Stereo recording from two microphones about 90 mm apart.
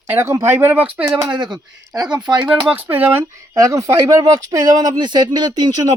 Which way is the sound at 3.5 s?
40° right (ahead or behind).